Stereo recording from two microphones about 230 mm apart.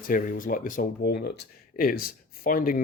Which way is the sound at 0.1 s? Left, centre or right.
Left.